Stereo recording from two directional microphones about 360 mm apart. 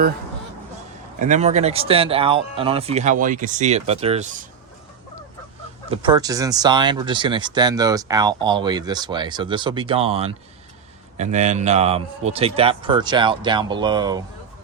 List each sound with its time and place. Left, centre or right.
1.2 s speech: centre
5.9 s speech: centre